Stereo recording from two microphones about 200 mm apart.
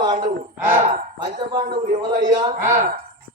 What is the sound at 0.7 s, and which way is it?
Speech, 40° right (ahead or behind).